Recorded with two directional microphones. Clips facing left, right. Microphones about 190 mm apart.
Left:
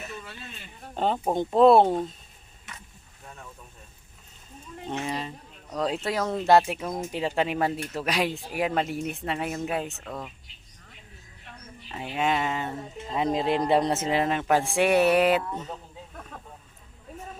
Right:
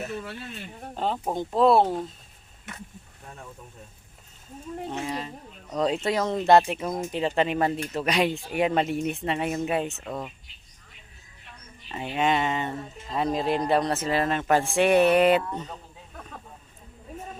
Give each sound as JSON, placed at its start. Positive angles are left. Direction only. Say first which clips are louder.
{"t": 0.0, "sound": "speech", "louder": "right 6 dB", "side_deg": -60}
{"t": 0.9, "sound": "speech", "louder": "left 3 dB", "side_deg": 0}
{"t": 4.9, "sound": "speech", "louder": "left 3 dB", "side_deg": 0}
{"t": 7.1, "sound": "speech", "louder": "right 2 dB", "side_deg": 10}
{"t": 11.9, "sound": "speech", "louder": "right 2 dB", "side_deg": 0}
{"t": 12.8, "sound": "speech", "louder": "even", "side_deg": 15}